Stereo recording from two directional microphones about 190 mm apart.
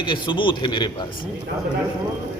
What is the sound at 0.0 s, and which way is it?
A man's voice, 25° left (ahead or behind).